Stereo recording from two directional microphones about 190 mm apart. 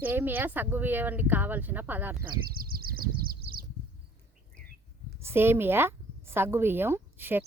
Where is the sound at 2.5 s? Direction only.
50° right (ahead or behind).